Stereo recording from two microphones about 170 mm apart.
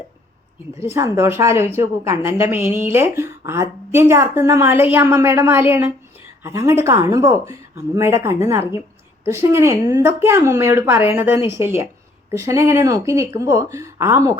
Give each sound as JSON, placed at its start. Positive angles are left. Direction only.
{"t": 0.9, "sound": "a woman's voice", "side_deg": -15}